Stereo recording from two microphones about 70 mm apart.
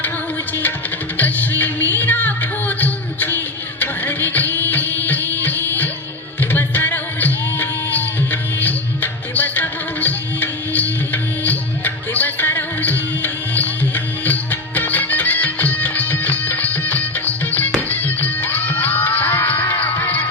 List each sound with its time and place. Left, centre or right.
1.1 s music: left